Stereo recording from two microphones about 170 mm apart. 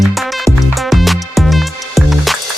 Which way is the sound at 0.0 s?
Centre (ahead or behind).